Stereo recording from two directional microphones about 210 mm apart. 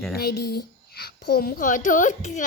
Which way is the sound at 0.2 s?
50° left (ahead or behind).